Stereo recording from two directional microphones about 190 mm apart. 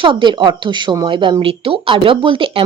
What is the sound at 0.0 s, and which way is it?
Speech, 25° right (ahead or behind).